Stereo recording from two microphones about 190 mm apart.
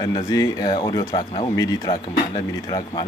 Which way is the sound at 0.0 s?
20° left (ahead or behind).